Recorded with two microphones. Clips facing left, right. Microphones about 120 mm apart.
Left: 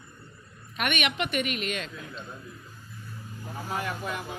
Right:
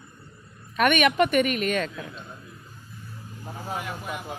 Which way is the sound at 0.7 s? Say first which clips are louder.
Right 9 dB; 45° right (ahead or behind).